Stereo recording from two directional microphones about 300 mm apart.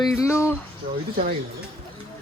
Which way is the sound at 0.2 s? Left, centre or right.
Centre.